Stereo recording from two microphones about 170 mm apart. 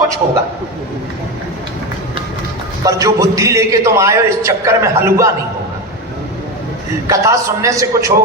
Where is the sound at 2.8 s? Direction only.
20° right (ahead or behind).